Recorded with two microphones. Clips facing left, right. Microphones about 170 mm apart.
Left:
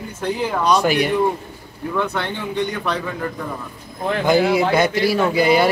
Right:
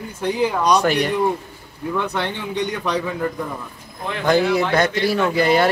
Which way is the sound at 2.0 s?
15° right (ahead or behind).